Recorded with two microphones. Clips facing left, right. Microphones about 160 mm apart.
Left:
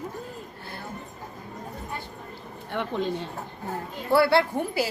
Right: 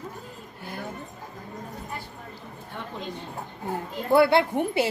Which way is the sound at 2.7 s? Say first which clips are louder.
Left 8 dB; 80° left.